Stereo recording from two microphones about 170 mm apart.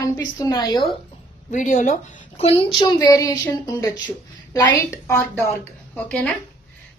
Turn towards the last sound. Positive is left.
turn(degrees=5)  # may be behind; listen again after turning